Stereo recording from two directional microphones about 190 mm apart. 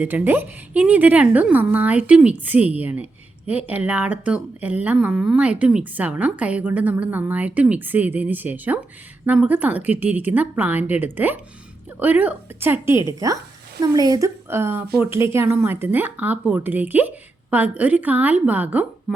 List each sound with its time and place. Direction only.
0.0 s speech: 10° right (ahead or behind)